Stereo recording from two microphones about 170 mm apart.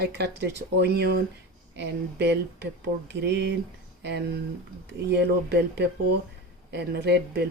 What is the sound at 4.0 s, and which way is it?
Speech, 80° right.